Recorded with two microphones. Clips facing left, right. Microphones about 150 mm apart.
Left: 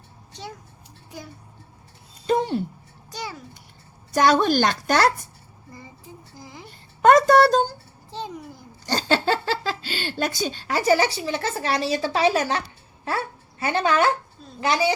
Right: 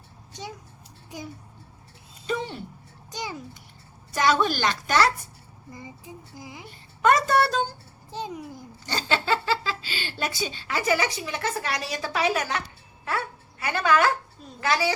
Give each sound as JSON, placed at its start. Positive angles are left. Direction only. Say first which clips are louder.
{"t": 2.2, "sound": "speech", "louder": "left 8 dB", "side_deg": 45}
{"t": 3.1, "sound": "a child's voice", "louder": "even", "side_deg": -20}
{"t": 4.1, "sound": "speech", "louder": "left 5 dB", "side_deg": 45}
{"t": 5.7, "sound": "speech", "louder": "right 2 dB", "side_deg": -15}
{"t": 6.7, "sound": "a child's voice", "louder": "left 5 dB", "side_deg": 45}
{"t": 8.1, "sound": "speech", "louder": "even", "side_deg": -15}
{"t": 8.9, "sound": "a woman's voice", "louder": "left 4 dB", "side_deg": 45}